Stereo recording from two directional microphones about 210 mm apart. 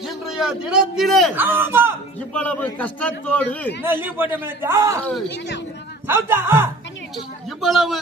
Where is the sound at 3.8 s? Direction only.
10° right (ahead or behind).